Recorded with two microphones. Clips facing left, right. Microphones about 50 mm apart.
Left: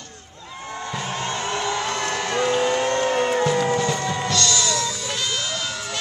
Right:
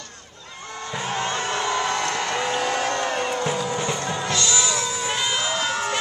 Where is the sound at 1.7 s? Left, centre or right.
Right.